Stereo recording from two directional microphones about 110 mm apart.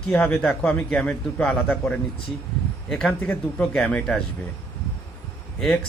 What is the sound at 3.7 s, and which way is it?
Speech, 5° left (ahead or behind).